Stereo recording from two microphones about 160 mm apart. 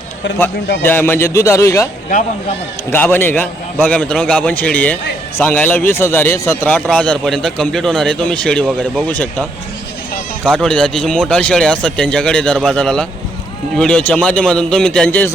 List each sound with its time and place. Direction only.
0.8 s a man's voice: 15° left (ahead or behind)
2.1 s speech: 60° left (ahead or behind)
2.9 s a man's voice: 10° left (ahead or behind)